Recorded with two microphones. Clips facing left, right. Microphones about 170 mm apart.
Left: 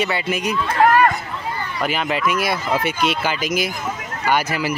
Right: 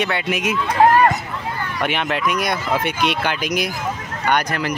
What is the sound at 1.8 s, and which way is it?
Speech, centre (ahead or behind).